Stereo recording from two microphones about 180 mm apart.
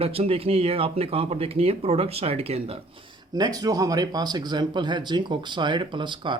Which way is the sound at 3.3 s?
20° right (ahead or behind).